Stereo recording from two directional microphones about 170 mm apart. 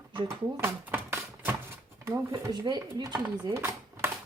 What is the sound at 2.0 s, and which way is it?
Speech, 20° right (ahead or behind).